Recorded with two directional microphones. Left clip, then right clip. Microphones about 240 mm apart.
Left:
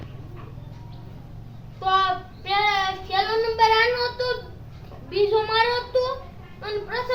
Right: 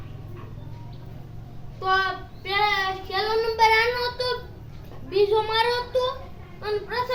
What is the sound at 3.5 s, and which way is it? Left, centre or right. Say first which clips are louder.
Child singing: left 1 dB; centre.